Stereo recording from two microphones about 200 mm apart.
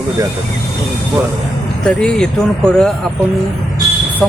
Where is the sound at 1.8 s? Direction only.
5° left (ahead or behind).